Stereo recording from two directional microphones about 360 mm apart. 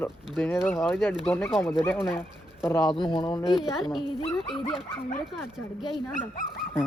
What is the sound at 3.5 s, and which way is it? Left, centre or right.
Speech, centre.